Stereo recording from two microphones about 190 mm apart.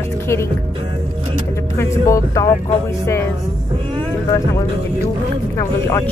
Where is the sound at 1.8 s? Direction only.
15° left (ahead or behind).